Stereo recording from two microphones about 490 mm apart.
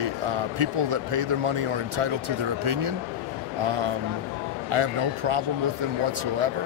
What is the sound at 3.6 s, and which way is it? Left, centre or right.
Speech, right.